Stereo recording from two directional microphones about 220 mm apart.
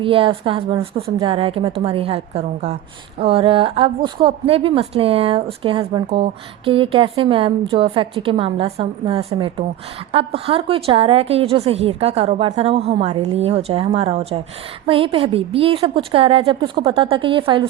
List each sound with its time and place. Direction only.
0.0 s a woman's voice: 25° right (ahead or behind)